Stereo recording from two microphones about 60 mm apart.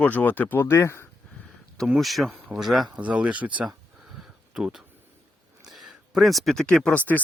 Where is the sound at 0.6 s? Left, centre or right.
Left.